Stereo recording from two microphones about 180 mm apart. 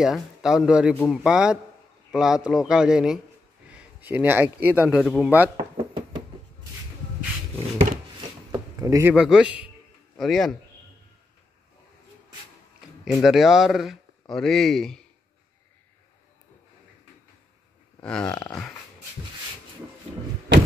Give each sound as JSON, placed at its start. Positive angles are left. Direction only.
{"t": 0.0, "sound": "a man's voice", "side_deg": -5}
{"t": 5.0, "sound": "a man's voice", "side_deg": 5}
{"t": 5.6, "sound": "a sound", "side_deg": -25}
{"t": 8.5, "sound": "a sound", "side_deg": -20}
{"t": 9.1, "sound": "a man's voice", "side_deg": -5}
{"t": 13.0, "sound": "a man's voice", "side_deg": 0}
{"t": 18.0, "sound": "a man's voice", "side_deg": 5}